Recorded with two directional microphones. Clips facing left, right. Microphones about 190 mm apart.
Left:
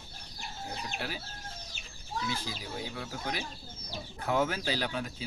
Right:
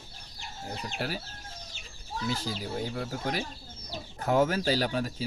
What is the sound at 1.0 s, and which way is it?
Speech, 45° right (ahead or behind).